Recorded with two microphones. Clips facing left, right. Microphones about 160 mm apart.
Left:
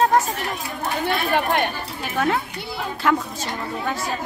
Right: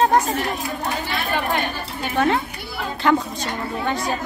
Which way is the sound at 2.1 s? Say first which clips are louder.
Right 2 dB; centre (ahead or behind).